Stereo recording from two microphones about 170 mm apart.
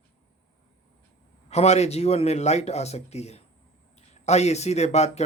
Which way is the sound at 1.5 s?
40° left (ahead or behind).